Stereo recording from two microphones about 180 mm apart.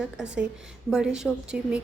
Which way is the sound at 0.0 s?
5° right (ahead or behind).